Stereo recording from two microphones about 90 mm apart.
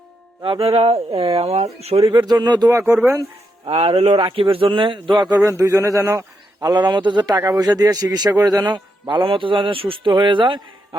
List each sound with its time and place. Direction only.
0.4 s speech: 80° right
2.2 s a man's voice: 50° right (ahead or behind)
2.6 s speech: 30° right (ahead or behind)
3.7 s a man's voice: 90° right; by 5.4 s 55° right (ahead or behind)
5.4 s a man's voice: 35° right (ahead or behind); by 10.6 s 65° right (ahead or behind)